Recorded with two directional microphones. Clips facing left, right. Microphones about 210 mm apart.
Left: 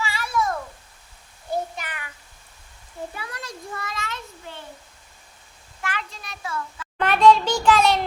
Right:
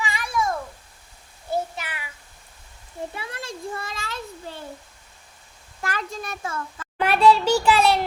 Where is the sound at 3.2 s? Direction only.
25° right (ahead or behind).